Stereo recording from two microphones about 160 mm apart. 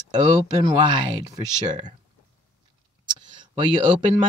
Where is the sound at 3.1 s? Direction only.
30° right (ahead or behind).